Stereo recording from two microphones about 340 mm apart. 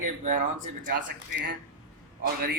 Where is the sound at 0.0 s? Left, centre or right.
Right.